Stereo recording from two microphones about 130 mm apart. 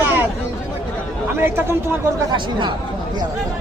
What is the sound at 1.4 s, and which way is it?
Speech, 20° right (ahead or behind).